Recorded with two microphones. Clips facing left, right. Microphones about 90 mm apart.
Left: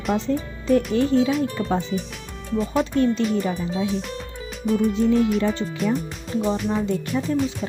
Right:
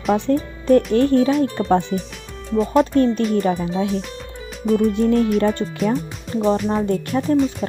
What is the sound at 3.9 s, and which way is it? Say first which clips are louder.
Music: right 2 dB; centre (ahead or behind).